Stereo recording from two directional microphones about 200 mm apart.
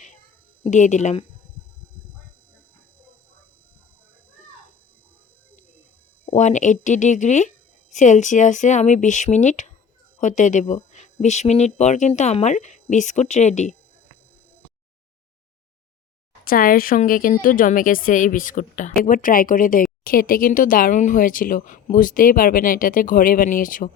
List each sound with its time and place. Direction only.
0.6 s speech: 35° left (ahead or behind)
6.2 s speech: 35° left (ahead or behind)
16.4 s a woman's voice: 45° left (ahead or behind)